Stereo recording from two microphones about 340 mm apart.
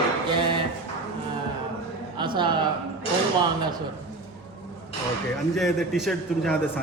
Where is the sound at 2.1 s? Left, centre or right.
Centre.